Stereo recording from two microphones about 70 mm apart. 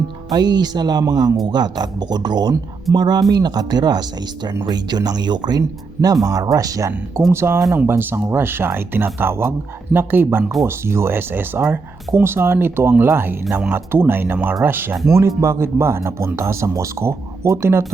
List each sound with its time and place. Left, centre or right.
0.3 s speech: right
2.9 s speech: right
7.3 s speech: right